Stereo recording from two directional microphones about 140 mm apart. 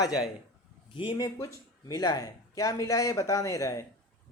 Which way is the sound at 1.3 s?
25° left (ahead or behind).